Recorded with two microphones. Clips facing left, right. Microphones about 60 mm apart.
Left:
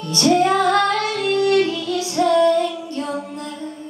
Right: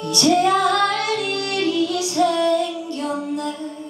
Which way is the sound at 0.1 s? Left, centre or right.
Left.